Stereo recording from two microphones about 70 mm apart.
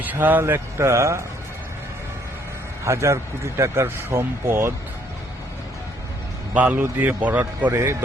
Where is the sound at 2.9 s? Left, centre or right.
Right.